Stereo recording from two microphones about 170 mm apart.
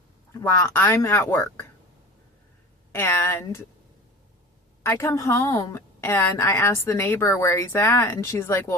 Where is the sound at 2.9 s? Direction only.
15° left (ahead or behind).